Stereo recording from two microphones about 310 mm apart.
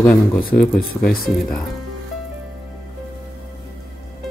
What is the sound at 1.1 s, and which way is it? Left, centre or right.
Speech, left.